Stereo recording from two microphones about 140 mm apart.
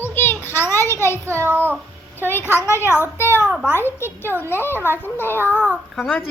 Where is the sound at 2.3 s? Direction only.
15° left (ahead or behind).